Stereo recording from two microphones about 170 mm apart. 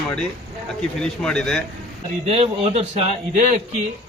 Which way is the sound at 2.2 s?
40° right (ahead or behind).